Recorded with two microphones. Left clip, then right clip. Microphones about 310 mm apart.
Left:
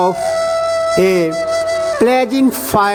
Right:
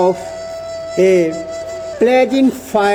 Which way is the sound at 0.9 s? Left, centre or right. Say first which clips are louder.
Right 6 dB; left.